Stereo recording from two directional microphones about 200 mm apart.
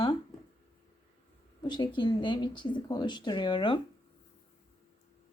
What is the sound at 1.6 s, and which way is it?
A woman's voice, 20° left (ahead or behind).